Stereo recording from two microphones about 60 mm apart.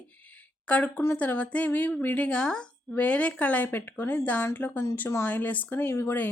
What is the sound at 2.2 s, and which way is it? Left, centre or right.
Speech, centre.